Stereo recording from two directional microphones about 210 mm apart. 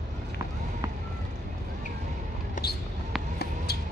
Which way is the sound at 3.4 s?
50° left (ahead or behind).